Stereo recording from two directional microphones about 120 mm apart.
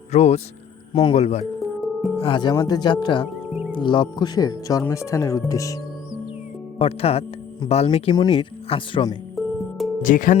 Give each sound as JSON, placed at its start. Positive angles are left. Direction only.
{"t": 0.1, "sound": "speech", "side_deg": 65}
{"t": 1.5, "sound": "music", "side_deg": 0}
{"t": 2.1, "sound": "speech", "side_deg": 45}
{"t": 6.7, "sound": "speech", "side_deg": 55}
{"t": 8.1, "sound": "speech", "side_deg": 35}
{"t": 8.4, "sound": "speech", "side_deg": 45}
{"t": 9.3, "sound": "music", "side_deg": 0}
{"t": 10.0, "sound": "speech", "side_deg": 90}